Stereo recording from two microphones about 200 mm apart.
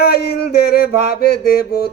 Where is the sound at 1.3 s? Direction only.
50° left (ahead or behind).